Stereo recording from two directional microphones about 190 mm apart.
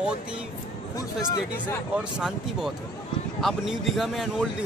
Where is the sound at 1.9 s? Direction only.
5° right (ahead or behind).